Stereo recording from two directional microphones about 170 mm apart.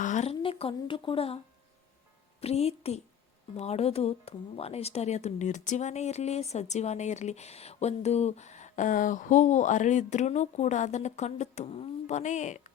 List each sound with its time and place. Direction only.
0.0 s a woman's voice: 45° left (ahead or behind)
2.4 s a woman's voice: 35° left (ahead or behind)